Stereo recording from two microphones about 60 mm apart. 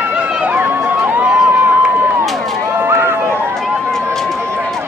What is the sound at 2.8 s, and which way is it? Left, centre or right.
Run, right.